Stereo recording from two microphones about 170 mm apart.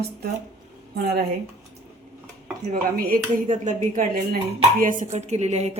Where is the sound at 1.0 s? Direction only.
65° right (ahead or behind).